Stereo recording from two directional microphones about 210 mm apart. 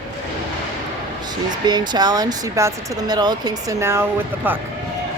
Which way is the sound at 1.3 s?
20° right (ahead or behind).